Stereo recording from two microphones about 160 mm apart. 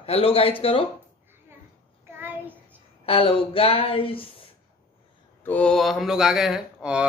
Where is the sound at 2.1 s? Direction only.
10° right (ahead or behind).